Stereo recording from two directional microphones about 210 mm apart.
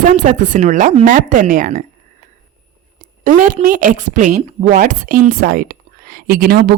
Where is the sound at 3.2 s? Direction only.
40° right (ahead or behind).